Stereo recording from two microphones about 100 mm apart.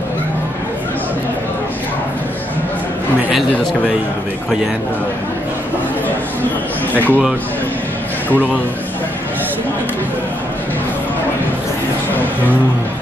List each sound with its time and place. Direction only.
6.9 s speech: 20° left (ahead or behind)
8.3 s a man's voice: 15° left (ahead or behind)